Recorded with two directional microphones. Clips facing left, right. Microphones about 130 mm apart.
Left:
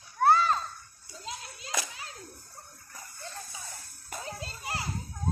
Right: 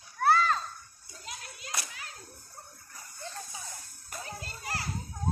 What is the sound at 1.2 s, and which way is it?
Clapping, 25° left (ahead or behind).